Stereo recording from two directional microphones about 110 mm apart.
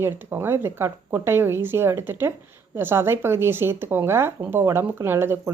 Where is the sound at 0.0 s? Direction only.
20° right (ahead or behind).